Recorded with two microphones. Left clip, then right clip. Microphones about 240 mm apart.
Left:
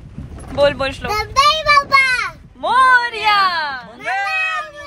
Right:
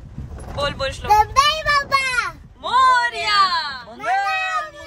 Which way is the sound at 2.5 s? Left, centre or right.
Centre.